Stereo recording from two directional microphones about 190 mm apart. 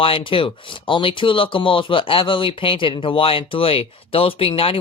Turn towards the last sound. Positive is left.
turn(degrees=30)  # may be behind; listen again after turning